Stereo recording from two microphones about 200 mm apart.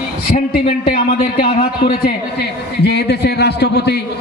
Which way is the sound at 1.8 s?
50° left (ahead or behind).